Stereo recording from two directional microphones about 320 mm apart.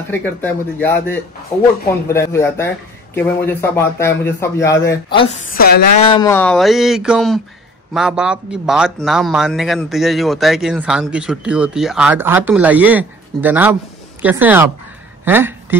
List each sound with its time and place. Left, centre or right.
0.1 s speech: centre
5.5 s speech: left
5.9 s speech: centre